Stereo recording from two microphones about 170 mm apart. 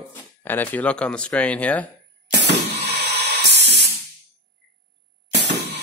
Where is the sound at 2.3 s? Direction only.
90° right.